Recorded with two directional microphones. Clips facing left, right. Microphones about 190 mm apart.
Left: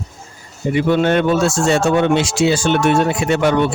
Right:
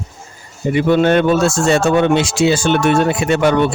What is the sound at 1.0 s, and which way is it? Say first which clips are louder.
Speech: right 2 dB; 55° right (ahead or behind).